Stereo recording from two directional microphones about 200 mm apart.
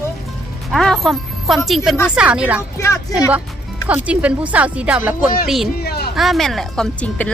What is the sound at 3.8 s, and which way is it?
Speech, 5° right (ahead or behind).